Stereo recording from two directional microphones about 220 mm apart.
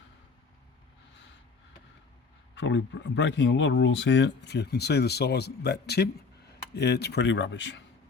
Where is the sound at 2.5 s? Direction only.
55° left (ahead or behind).